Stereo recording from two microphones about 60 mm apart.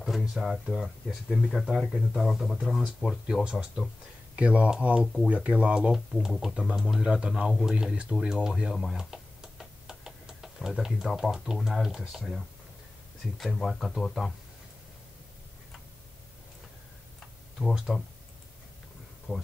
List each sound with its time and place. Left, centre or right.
0.0 s speech: centre
2.8 s speech: centre
3.3 s speech: centre
4.4 s speech: centre
5.0 s speech: centre
5.3 s speech: right
8.7 s computer keyboard: centre
13.4 s speech: centre
17.9 s speech: centre
19.3 s speech: right